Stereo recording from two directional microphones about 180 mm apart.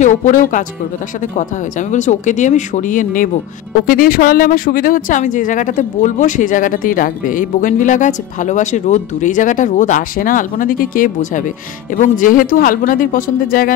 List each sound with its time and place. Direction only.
0.0 s speech: 45° left (ahead or behind)